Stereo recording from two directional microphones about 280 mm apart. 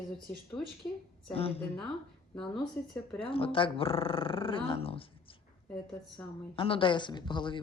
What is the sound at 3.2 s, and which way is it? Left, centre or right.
Speech, centre.